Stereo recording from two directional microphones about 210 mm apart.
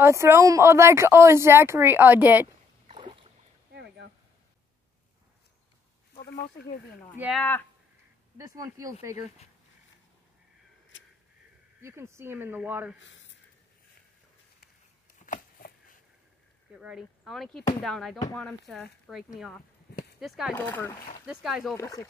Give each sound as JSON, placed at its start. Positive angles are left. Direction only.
{"t": 0.0, "sound": "speech", "side_deg": -10}
{"t": 2.9, "sound": "boat", "side_deg": -25}
{"t": 3.7, "sound": "a sound", "side_deg": -55}
{"t": 6.1, "sound": "speech", "side_deg": 45}
{"t": 7.2, "sound": "speech", "side_deg": -5}
{"t": 8.4, "sound": "speech", "side_deg": -15}
{"t": 10.9, "sound": "a sound", "side_deg": 60}
{"t": 11.8, "sound": "speech", "side_deg": -10}
{"t": 13.0, "sound": "a sound", "side_deg": 60}
{"t": 15.1, "sound": "a sound", "side_deg": 40}
{"t": 16.7, "sound": "speech", "side_deg": -5}
{"t": 20.5, "sound": "speech", "side_deg": 10}
{"t": 21.3, "sound": "speech", "side_deg": -5}
{"t": 21.7, "sound": "speech", "side_deg": 15}